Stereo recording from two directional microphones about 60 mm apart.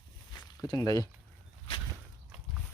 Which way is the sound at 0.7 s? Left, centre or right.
Left.